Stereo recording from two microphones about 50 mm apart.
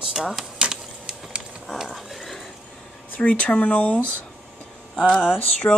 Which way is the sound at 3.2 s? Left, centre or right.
Left.